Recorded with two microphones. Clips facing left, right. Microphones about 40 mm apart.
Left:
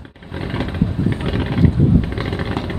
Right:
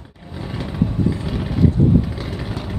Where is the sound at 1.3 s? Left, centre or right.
Left.